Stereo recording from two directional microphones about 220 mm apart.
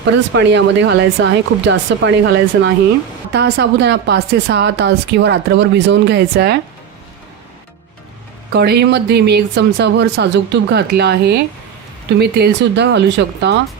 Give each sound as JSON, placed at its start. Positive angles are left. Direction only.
{"t": 0.0, "sound": "speech", "side_deg": -55}
{"t": 8.5, "sound": "speech", "side_deg": -45}